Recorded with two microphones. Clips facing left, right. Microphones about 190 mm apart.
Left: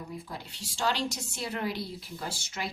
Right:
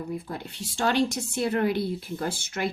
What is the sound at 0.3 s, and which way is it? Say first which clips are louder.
Speech: right 6 dB; 55° right (ahead or behind).